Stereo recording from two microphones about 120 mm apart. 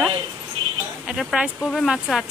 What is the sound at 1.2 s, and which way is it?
Speech, centre (ahead or behind).